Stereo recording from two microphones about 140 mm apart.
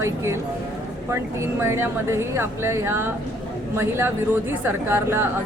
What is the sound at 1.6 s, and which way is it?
A woman's voice, 20° right (ahead or behind).